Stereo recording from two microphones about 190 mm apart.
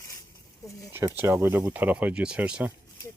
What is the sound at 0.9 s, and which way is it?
Speech, 10° right (ahead or behind).